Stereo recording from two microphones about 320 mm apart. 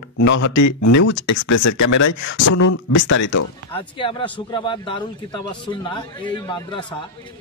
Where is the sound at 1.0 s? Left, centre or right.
Left.